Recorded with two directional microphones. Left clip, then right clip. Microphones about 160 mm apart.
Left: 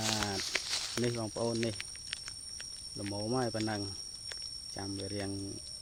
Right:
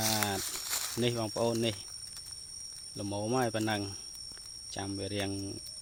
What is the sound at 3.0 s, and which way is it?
Speech, 15° right (ahead or behind).